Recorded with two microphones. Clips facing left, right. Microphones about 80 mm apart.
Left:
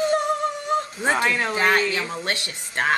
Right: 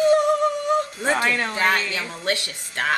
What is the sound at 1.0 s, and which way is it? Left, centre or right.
Speech, centre.